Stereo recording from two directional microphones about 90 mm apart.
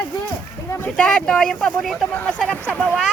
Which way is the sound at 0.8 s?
10° left (ahead or behind).